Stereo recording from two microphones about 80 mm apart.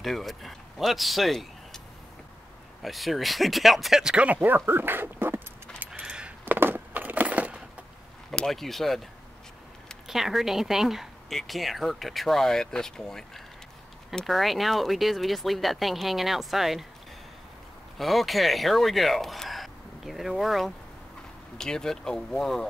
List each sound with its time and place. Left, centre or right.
0.0 s speech: centre
2.8 s speech: centre; by 5.4 s right
5.9 s keys jangling: centre
6.4 s a sound: right
8.3 s speech: centre
10.0 s speech: centre
17.9 s speech: centre